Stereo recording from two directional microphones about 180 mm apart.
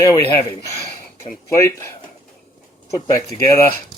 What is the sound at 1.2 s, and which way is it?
Speech, 15° left (ahead or behind).